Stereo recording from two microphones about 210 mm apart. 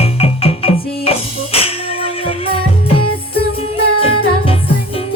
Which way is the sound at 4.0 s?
25° left (ahead or behind).